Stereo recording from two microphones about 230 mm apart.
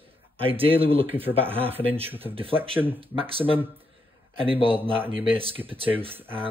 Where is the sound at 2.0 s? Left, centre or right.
Centre.